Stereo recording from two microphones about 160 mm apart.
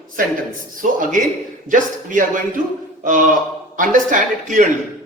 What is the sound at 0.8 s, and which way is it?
A woman's voice, 55° right (ahead or behind).